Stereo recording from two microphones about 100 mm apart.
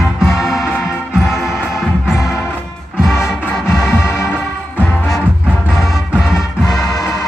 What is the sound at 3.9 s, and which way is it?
Music, 30° left (ahead or behind).